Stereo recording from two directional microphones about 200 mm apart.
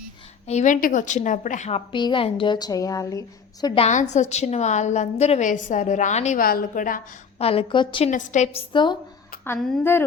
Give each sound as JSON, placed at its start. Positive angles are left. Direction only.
{"t": 0.4, "sound": "a woman's voice", "side_deg": 35}
{"t": 3.8, "sound": "a woman's voice", "side_deg": 35}
{"t": 7.4, "sound": "a woman's voice", "side_deg": 25}
{"t": 8.1, "sound": "a woman's voice", "side_deg": 35}
{"t": 8.7, "sound": "a woman's voice", "side_deg": 25}
{"t": 9.4, "sound": "a woman's voice", "side_deg": 5}